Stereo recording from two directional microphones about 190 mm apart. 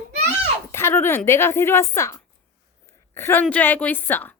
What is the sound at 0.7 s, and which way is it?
Speech, 10° left (ahead or behind).